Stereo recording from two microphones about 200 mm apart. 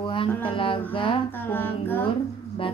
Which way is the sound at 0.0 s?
25° left (ahead or behind).